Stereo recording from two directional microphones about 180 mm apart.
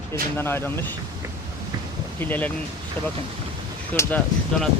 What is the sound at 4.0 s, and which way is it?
Speech, 15° left (ahead or behind).